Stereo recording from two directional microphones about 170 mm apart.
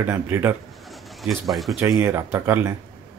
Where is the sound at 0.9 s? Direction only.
Centre (ahead or behind).